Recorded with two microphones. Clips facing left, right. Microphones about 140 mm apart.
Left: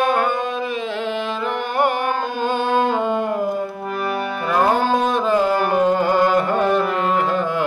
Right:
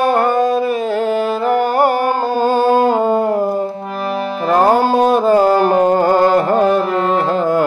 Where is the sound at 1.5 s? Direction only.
35° right (ahead or behind).